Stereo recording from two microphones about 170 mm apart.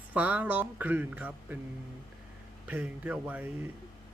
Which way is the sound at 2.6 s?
10° right (ahead or behind).